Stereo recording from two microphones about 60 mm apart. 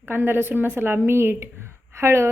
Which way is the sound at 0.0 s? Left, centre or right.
Right.